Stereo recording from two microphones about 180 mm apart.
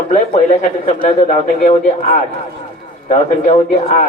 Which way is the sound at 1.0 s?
40° left (ahead or behind).